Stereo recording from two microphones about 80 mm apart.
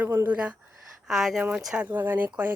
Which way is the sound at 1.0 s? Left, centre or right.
Centre.